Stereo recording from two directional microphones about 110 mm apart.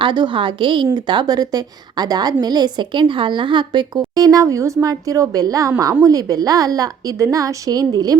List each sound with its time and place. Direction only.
0.0 s a woman's voice: 45° right (ahead or behind)